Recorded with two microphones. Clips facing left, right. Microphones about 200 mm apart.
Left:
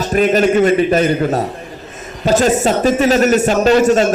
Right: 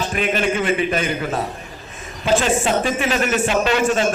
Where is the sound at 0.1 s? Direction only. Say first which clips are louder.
Left 11 dB; 40° left (ahead or behind).